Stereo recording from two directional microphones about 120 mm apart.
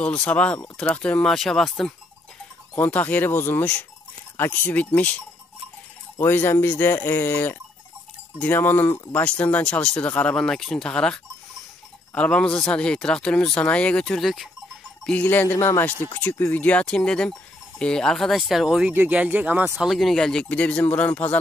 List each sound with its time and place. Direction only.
0.0 s speech: 10° left (ahead or behind)
2.8 s speech: 15° left (ahead or behind)
12.2 s speech: 10° left (ahead or behind)
15.0 s speech: 15° left (ahead or behind); by 19.9 s 15° right (ahead or behind)
19.9 s speech: centre (ahead or behind)